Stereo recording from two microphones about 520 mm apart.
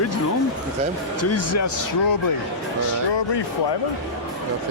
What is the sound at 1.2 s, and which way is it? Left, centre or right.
Speech, left.